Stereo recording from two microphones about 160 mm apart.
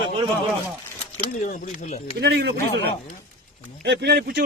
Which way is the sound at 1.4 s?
50° left (ahead or behind).